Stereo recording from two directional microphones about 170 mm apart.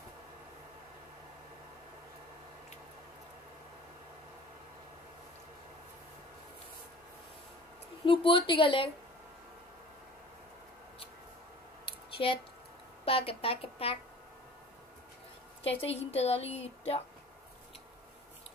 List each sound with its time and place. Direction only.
8.0 s a woman's voice: 30° left (ahead or behind)
12.2 s a woman's voice: 35° left (ahead or behind)
15.6 s a woman's voice: 35° left (ahead or behind)